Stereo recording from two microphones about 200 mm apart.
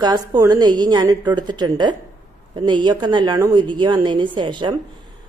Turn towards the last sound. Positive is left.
turn(degrees=-20)  # may be behind; listen again after turning